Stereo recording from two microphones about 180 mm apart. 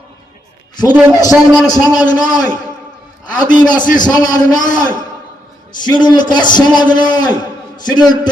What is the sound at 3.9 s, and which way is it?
Speech, 20° left (ahead or behind).